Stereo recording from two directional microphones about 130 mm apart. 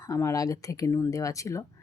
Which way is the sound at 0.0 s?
25° left (ahead or behind).